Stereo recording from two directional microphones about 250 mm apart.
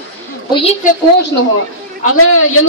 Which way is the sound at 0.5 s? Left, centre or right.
Left.